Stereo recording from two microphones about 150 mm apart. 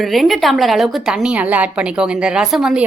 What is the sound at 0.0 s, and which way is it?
A woman's voice, centre (ahead or behind).